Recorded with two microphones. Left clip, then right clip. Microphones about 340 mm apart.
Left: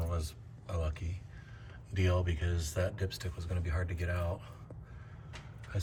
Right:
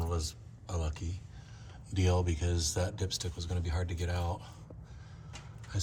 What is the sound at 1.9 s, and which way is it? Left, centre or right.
Speech, centre.